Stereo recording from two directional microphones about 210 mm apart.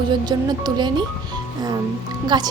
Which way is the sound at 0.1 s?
20° right (ahead or behind).